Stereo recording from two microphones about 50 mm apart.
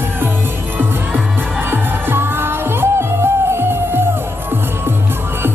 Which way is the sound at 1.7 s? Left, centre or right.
Right.